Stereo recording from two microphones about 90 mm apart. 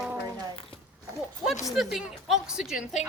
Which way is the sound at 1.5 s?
5° right (ahead or behind).